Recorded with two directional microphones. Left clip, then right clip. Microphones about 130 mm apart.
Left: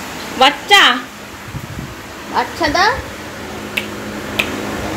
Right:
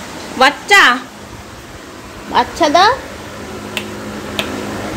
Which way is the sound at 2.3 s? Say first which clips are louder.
Right 5 dB; 45° right (ahead or behind).